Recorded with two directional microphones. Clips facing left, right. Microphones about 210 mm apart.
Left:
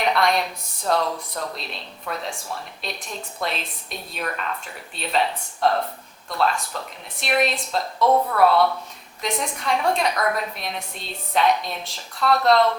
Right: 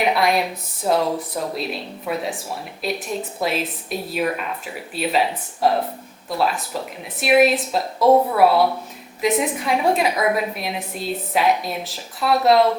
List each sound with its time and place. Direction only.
0.2 s a woman's voice: 5° right (ahead or behind)
2.1 s speech: 15° right (ahead or behind)
2.8 s a woman's voice: 5° right (ahead or behind)
8.0 s a woman's voice: 25° right (ahead or behind)
8.4 s a woman's voice: 5° right (ahead or behind)